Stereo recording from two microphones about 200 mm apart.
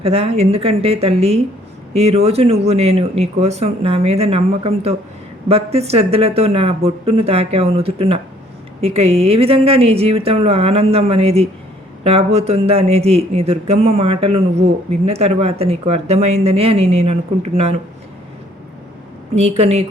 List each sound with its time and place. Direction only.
0.0 s speech: 30° right (ahead or behind)
19.4 s speech: 30° right (ahead or behind)